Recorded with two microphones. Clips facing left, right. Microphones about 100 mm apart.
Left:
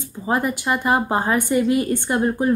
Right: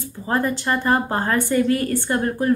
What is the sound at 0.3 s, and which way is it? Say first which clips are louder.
A woman's voice: even; 15° left (ahead or behind).